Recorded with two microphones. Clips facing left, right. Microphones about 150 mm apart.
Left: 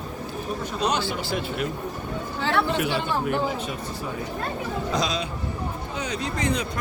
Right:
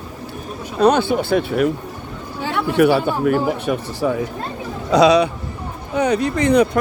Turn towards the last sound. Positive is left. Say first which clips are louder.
# right 11 dB
turn(degrees=-65)  # may be behind; listen again after turning